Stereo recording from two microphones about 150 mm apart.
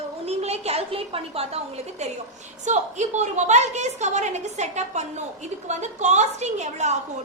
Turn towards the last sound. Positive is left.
turn(degrees=-50)  # may be behind; listen again after turning